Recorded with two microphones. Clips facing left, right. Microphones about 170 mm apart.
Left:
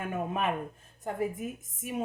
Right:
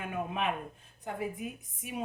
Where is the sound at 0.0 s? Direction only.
45° left (ahead or behind).